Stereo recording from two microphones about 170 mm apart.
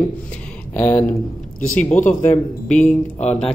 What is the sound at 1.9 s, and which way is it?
Speech, 50° left (ahead or behind).